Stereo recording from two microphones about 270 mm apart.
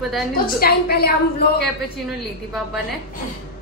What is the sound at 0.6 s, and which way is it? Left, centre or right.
Speech, left.